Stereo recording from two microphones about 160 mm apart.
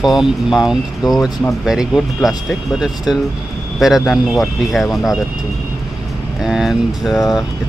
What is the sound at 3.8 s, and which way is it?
Speech, centre (ahead or behind).